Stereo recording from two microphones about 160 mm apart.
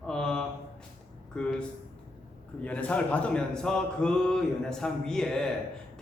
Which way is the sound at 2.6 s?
10° left (ahead or behind).